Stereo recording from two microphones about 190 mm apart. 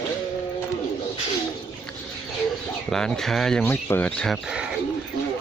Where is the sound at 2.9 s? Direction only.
5° left (ahead or behind).